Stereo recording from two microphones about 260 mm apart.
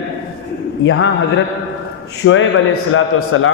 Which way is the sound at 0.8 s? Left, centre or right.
Left.